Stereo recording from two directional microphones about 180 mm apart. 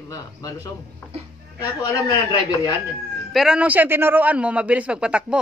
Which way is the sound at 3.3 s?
5° right (ahead or behind).